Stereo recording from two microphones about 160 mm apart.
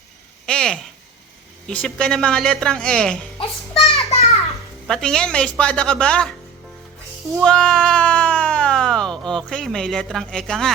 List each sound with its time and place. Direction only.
0.4 s a sound: 5° left (ahead or behind)
1.6 s speech: 5° left (ahead or behind)
3.3 s music: 40° left (ahead or behind)
4.9 s a woman's voice: 5° left (ahead or behind)
7.4 s speech: 5° left (ahead or behind)